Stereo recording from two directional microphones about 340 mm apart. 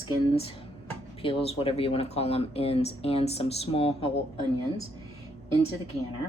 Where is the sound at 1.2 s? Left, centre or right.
Centre.